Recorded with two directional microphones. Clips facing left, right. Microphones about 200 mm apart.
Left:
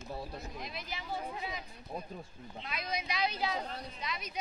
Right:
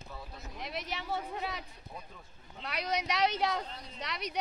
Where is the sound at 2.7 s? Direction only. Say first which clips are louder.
Right 5 dB; 70° right (ahead or behind).